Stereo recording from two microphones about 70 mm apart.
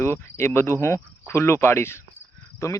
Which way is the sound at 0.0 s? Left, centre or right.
Left.